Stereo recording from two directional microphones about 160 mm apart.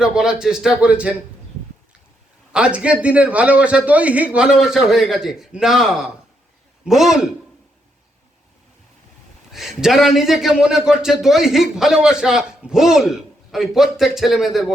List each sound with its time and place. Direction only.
0.0 s a man's voice: 5° right (ahead or behind)
2.5 s a man's voice: 5° right (ahead or behind)
9.5 s a man's voice: centre (ahead or behind)